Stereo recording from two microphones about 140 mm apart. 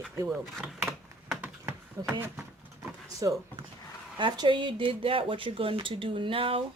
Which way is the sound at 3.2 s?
25° right (ahead or behind).